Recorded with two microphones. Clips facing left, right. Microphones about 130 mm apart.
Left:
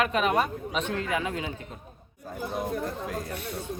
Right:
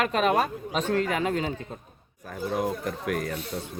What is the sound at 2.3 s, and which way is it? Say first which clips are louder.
Speech: right 3 dB; 75° right (ahead or behind).